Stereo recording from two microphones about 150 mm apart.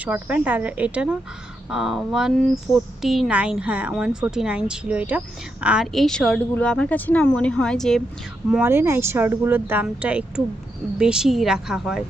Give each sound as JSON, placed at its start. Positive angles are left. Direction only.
{"t": 0.0, "sound": "a woman's voice", "side_deg": -10}
{"t": 8.7, "sound": "a woman's voice", "side_deg": -15}